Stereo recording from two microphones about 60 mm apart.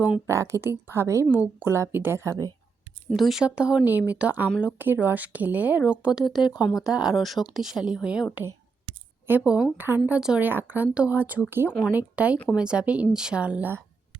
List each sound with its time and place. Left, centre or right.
0.3 s speech: right
1.9 s a woman's voice: right
2.1 s speech: right
3.1 s speech: centre
3.4 s speech: centre
3.8 s speech: right
6.2 s speech: centre
7.2 s speech: centre
9.3 s a woman's voice: right
10.2 s speech: centre
10.4 s speech: right
11.4 s a woman's voice: right
11.9 s speech: right